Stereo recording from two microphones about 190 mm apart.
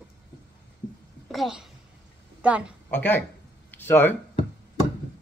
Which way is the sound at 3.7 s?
10° left (ahead or behind).